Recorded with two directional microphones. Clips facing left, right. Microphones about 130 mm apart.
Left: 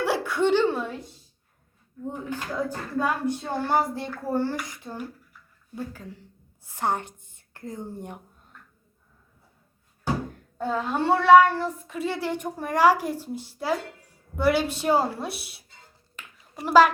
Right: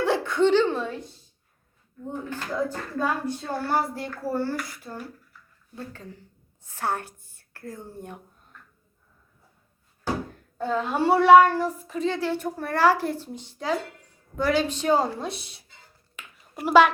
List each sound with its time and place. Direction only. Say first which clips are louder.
0.0 s a sound: right 2 dB; 5° left (ahead or behind)
2.3 s speech: right 2 dB; 10° left (ahead or behind)
6.7 s a woman's voice: left 2 dB; 15° left (ahead or behind)
10.6 s a woman's voice: right 1 dB; 5° left (ahead or behind)
10.9 s speech: right 1 dB; 10° right (ahead or behind)
11.9 s speech: right 2 dB; 5° left (ahead or behind)
16.1 s a sound: right 1 dB; 5° right (ahead or behind)